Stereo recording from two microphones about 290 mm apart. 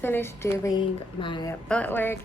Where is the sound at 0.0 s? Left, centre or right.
Centre.